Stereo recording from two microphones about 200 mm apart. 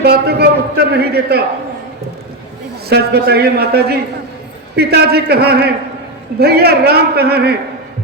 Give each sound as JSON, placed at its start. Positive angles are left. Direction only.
{"t": 0.0, "sound": "a man's voice", "side_deg": -55}
{"t": 2.9, "sound": "a man's voice", "side_deg": -55}